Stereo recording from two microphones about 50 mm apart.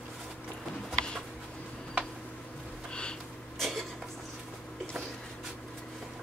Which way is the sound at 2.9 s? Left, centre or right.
Centre.